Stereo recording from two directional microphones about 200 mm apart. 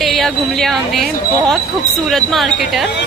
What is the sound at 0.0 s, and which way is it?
Speech, centre (ahead or behind).